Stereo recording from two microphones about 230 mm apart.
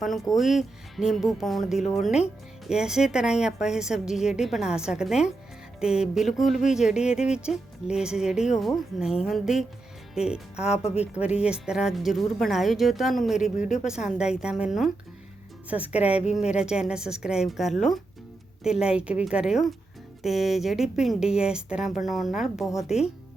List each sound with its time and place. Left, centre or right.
0.3 s speech: centre
10.8 s speech: left
11.1 s speech: centre